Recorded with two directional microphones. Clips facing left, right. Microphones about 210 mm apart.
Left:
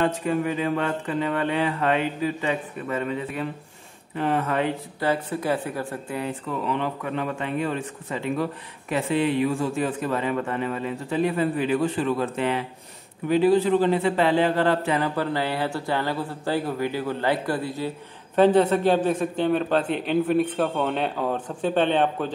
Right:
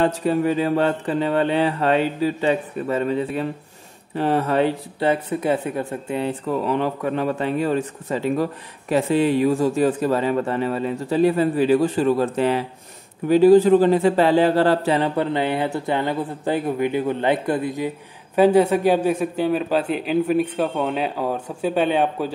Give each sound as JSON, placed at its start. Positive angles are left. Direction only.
{"t": 0.0, "sound": "a man's voice", "side_deg": -35}
{"t": 5.1, "sound": "a man's voice", "side_deg": -20}
{"t": 6.6, "sound": "a man's voice", "side_deg": -40}